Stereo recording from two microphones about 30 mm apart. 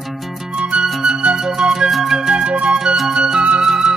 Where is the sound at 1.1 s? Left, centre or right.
Right.